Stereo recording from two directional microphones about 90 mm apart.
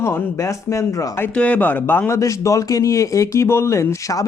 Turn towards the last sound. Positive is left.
turn(degrees=35)  # may be behind; listen again after turning